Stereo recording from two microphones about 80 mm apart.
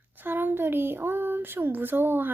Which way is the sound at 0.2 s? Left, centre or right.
Right.